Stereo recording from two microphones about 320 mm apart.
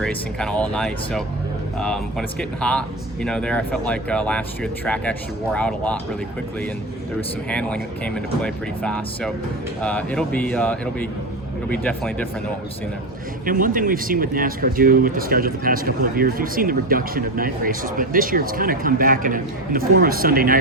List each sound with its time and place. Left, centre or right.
0.0 s speech: centre
7.5 s speech: centre
13.4 s speech: right